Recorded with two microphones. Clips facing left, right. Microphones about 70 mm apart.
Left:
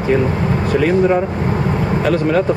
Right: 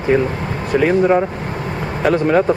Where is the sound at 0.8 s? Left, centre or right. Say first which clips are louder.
Right 1 dB; centre.